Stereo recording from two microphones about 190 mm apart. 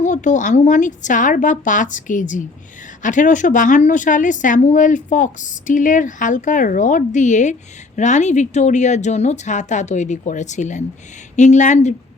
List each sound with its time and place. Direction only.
0.0 s a woman's voice: 40° left (ahead or behind)